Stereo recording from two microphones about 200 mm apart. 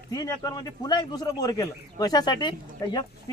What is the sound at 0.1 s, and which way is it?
A man's voice, 20° left (ahead or behind).